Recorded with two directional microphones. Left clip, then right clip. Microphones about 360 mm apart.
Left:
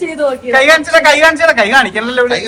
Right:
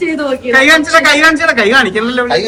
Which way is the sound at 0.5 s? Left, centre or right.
Centre.